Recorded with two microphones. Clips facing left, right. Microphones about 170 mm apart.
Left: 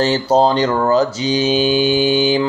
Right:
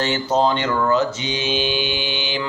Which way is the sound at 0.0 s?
35° left (ahead or behind).